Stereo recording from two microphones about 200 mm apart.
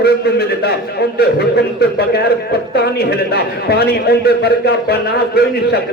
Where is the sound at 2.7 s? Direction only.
50° left (ahead or behind).